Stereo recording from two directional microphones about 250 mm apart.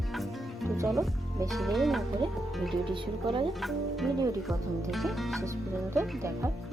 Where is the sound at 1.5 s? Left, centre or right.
Centre.